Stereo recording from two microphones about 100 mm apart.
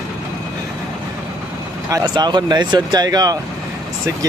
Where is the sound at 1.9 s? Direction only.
45° right (ahead or behind).